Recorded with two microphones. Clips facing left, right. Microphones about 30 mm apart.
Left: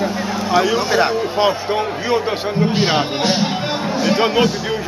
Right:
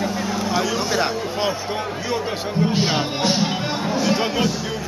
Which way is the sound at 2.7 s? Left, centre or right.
Centre.